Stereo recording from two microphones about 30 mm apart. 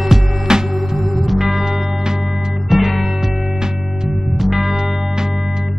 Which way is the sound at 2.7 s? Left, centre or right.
Centre.